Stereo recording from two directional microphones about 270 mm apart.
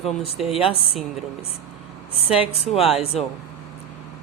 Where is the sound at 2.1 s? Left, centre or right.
Left.